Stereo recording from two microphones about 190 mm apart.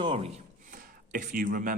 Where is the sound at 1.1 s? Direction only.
45° right (ahead or behind).